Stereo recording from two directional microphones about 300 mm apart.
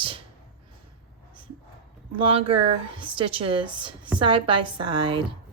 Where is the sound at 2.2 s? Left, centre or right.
Centre.